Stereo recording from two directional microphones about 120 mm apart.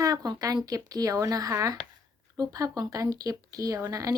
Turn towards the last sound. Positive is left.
turn(degrees=-30)  # may be behind; listen again after turning